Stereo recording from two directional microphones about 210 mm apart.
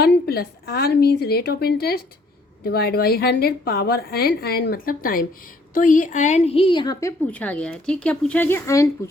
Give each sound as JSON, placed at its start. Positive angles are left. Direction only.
{"t": 0.3, "sound": "a woman's voice", "side_deg": 45}
{"t": 7.3, "sound": "speech", "side_deg": 5}